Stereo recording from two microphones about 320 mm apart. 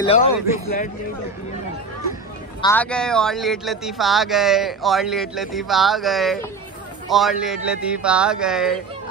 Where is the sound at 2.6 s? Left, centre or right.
Centre.